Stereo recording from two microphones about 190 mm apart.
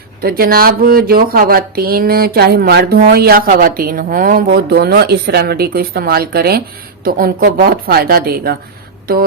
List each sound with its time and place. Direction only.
0.2 s speech: 50° right (ahead or behind)